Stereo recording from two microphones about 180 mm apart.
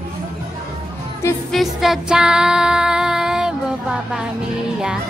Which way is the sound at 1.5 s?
Centre (ahead or behind).